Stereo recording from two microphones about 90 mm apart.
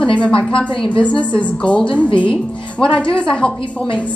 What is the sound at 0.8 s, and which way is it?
A woman's voice, 15° left (ahead or behind).